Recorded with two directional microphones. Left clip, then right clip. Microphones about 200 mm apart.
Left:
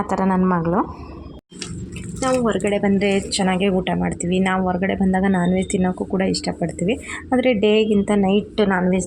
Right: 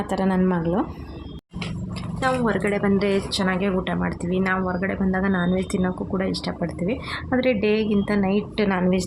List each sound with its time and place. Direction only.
0.1 s a woman's voice: 10° left (ahead or behind)
2.2 s a woman's voice: 10° left (ahead or behind)
8.7 s a woman's voice: 5° left (ahead or behind)